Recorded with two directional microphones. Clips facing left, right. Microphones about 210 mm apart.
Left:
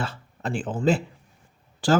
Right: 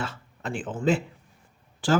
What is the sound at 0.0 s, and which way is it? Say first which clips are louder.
Speech: left 2 dB; 35° left (ahead or behind).